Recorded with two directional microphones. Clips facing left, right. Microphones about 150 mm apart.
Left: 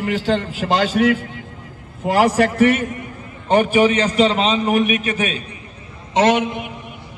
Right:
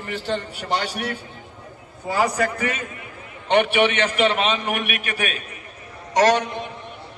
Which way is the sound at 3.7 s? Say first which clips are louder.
Left 4 dB; 35° left (ahead or behind).